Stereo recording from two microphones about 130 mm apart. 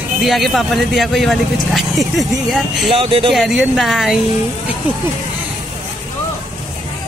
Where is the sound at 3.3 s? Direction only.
5° right (ahead or behind).